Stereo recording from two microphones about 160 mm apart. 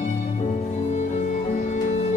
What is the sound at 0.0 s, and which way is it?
Music, 50° left (ahead or behind).